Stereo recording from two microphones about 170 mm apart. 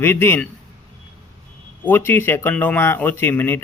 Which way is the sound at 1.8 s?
10° left (ahead or behind).